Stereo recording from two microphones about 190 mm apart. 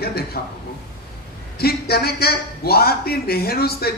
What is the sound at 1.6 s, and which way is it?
A man's voice, 55° left (ahead or behind).